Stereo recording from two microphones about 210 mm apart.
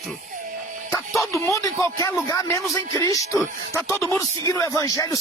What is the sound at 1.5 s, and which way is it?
Speech, 15° left (ahead or behind).